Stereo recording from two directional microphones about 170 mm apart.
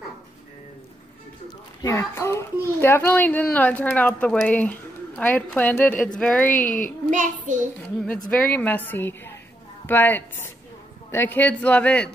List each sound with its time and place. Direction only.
1.8 s a child's voice: 15° left (ahead or behind)
6.6 s a woman's voice: 50° left (ahead or behind)
7.1 s a child's voice: 45° right (ahead or behind)
8.3 s a child's voice: 10° left (ahead or behind)